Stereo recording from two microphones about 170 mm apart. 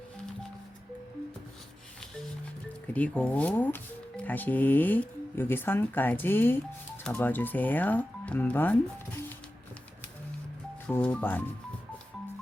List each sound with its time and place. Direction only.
2.8 s speech: 10° left (ahead or behind)
10.8 s speech: 5° left (ahead or behind)